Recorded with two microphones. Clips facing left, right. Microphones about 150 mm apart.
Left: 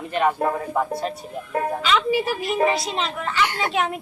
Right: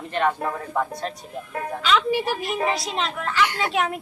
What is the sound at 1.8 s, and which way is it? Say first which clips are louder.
Music: right 2 dB; centre (ahead or behind).